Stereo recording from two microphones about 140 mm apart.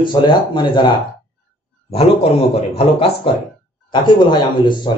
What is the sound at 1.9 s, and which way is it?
A man's voice, 45° left (ahead or behind).